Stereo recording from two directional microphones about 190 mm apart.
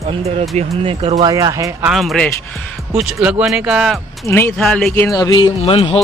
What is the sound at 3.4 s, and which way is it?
Speech, 5° right (ahead or behind).